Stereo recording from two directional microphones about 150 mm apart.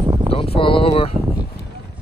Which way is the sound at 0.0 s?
30° right (ahead or behind).